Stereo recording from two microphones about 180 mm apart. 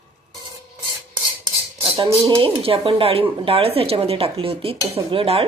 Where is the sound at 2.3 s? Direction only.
30° right (ahead or behind).